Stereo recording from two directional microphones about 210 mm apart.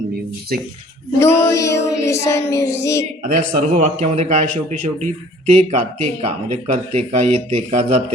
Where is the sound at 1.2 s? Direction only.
15° left (ahead or behind).